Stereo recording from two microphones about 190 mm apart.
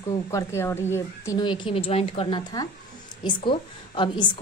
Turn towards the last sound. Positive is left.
turn(degrees=25)  # may be behind; listen again after turning